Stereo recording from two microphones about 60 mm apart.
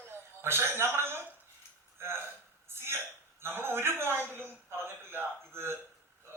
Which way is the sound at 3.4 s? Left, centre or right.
Right.